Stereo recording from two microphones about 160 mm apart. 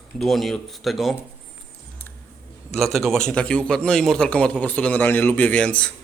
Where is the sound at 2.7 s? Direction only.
Centre (ahead or behind).